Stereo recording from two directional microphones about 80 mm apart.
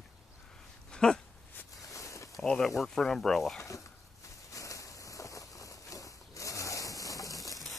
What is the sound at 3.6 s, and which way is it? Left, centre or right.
Speech, left.